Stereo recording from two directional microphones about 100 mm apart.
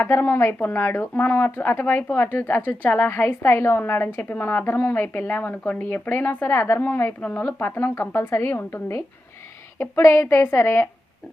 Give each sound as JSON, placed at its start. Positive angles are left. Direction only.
{"t": 0.0, "sound": "a woman's voice", "side_deg": 20}